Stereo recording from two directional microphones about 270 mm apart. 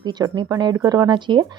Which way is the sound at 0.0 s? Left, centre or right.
Centre.